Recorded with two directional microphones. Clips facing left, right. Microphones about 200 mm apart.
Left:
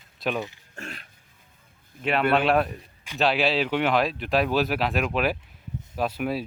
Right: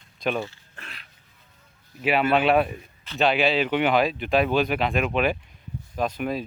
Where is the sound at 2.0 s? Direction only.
5° right (ahead or behind).